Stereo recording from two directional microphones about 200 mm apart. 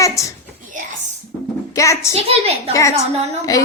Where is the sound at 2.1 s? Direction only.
30° right (ahead or behind).